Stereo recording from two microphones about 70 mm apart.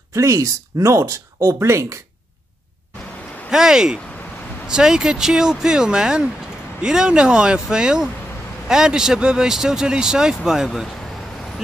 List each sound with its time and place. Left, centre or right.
0.1 s speech: right
3.4 s speech: centre